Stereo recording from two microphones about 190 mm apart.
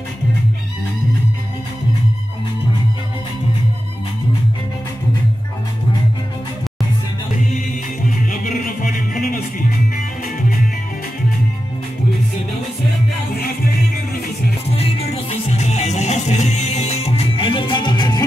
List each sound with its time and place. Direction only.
8.3 s music: 45° left (ahead or behind)
14.8 s music: 30° left (ahead or behind)